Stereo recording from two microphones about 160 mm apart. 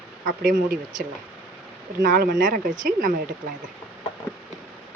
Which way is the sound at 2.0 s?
70° right (ahead or behind).